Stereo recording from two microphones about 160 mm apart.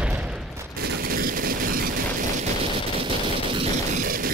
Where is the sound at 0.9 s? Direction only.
70° right (ahead or behind).